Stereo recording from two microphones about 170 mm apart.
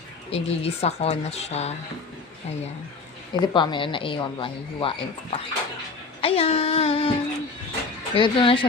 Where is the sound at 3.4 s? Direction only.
25° left (ahead or behind).